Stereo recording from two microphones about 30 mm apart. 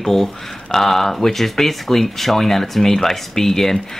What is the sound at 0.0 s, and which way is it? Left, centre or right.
Speech, centre.